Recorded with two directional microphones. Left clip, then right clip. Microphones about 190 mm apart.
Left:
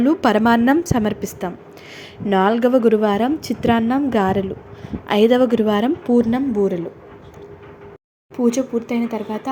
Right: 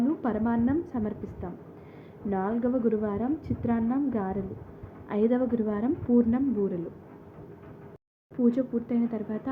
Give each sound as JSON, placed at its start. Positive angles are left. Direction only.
{"t": 0.0, "sound": "a woman's voice", "side_deg": 45}
{"t": 8.9, "sound": "speech", "side_deg": 15}